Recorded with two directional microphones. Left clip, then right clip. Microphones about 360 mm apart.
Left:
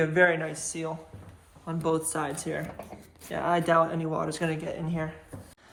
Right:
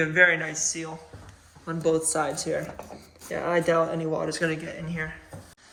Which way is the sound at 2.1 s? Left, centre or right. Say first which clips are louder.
Right 5 dB; centre.